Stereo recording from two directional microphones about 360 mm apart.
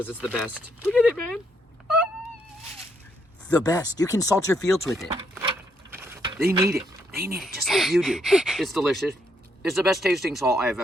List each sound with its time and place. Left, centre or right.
0.0 s speech: centre
3.5 s speech: centre
5.3 s a sound: centre
7.3 s speech: centre